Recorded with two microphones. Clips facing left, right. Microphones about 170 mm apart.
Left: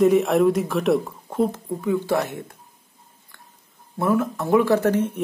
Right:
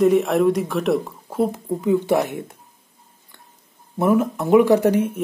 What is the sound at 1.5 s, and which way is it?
Speech, 20° right (ahead or behind).